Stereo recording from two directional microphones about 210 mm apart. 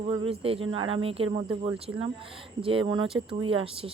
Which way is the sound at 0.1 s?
25° right (ahead or behind).